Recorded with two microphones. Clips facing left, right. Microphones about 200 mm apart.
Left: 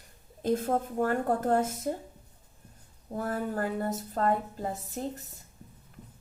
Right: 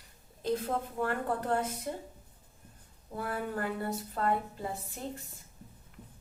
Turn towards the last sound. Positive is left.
turn(degrees=40)  # may be behind; listen again after turning